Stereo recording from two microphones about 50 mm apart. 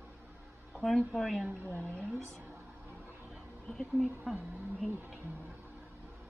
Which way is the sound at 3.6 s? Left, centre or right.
Centre.